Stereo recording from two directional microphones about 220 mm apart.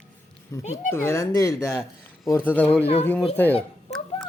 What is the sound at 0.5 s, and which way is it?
Speech, 10° left (ahead or behind).